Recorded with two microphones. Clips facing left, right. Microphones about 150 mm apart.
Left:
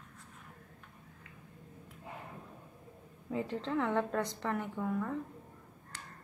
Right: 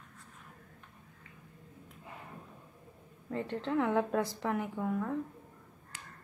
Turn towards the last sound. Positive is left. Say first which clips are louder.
# left 1 dB
turn(degrees=-10)  # may be behind; listen again after turning